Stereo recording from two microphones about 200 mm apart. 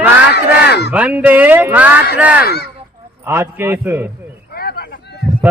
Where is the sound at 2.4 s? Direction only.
50° left (ahead or behind).